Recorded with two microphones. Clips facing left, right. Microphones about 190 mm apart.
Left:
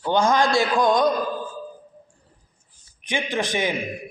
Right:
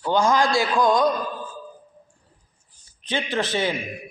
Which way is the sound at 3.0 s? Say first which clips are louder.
Even; 15° left (ahead or behind).